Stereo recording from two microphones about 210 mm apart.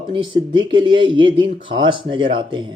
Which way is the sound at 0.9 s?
20° right (ahead or behind).